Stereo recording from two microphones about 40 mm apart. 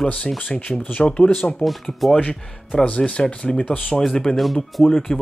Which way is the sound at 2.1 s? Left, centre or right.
Left.